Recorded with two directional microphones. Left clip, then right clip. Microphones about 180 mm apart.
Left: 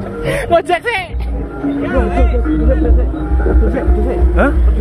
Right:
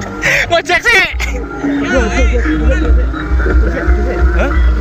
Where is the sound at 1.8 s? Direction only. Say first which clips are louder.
Right 3 dB; 55° left (ahead or behind).